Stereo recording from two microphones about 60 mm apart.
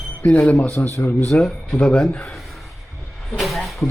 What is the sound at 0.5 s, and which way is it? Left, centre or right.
Speech, left.